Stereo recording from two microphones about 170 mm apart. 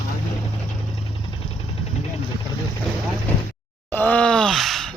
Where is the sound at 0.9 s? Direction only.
35° left (ahead or behind).